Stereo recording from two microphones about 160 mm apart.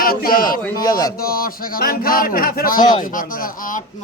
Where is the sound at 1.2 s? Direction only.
65° left (ahead or behind).